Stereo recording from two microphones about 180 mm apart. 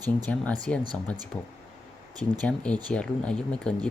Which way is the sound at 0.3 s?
5° left (ahead or behind).